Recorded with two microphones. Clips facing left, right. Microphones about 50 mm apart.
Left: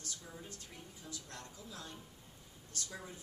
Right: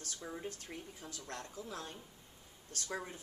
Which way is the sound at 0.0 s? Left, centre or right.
Right.